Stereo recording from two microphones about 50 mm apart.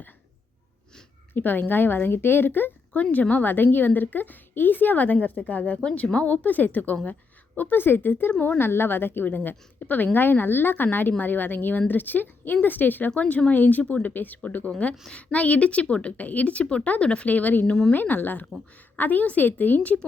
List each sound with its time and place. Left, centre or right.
1.3 s a woman's voice: left
3.0 s a woman's voice: left
8.3 s a woman's voice: left
13.1 s a woman's voice: left
17.2 s a woman's voice: left